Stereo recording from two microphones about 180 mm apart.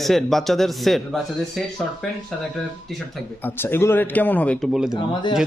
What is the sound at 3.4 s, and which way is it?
Speech, 10° left (ahead or behind).